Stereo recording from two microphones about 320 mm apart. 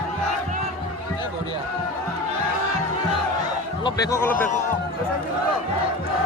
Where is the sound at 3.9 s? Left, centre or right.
Centre.